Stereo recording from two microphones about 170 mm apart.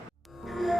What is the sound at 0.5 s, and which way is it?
Music, centre (ahead or behind).